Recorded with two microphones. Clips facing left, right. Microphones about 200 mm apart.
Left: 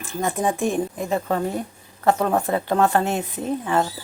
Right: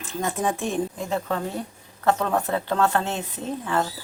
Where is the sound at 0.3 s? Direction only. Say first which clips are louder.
Left 3 dB; 15° left (ahead or behind).